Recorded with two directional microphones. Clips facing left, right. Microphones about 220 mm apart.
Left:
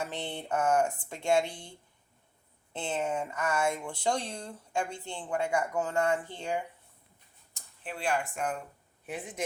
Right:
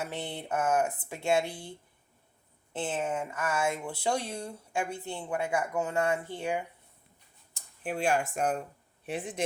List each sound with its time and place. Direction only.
0.0 s speech: 10° right (ahead or behind)
2.7 s speech: 5° right (ahead or behind)
7.9 s speech: 45° right (ahead or behind); by 9.4 s 30° right (ahead or behind)